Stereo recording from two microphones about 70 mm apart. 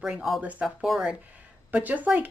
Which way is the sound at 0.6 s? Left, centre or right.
Centre.